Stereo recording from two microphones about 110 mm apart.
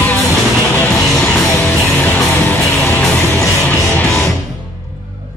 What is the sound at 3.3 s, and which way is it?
Music, 25° left (ahead or behind).